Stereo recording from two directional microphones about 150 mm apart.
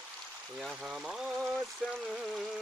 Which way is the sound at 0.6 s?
Centre (ahead or behind).